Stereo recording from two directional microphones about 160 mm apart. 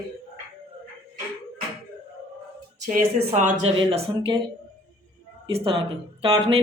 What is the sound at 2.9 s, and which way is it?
Speech, 50° right (ahead or behind).